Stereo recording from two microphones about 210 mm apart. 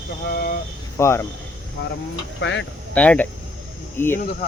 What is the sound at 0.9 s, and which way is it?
Speech, 15° left (ahead or behind).